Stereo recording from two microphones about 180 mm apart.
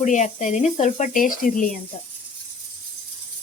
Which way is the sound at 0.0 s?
40° left (ahead or behind).